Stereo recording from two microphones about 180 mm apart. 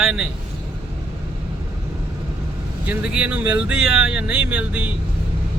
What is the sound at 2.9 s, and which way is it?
Speech, 5° right (ahead or behind).